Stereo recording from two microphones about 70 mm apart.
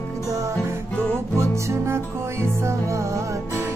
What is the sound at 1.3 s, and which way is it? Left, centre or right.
Music, right.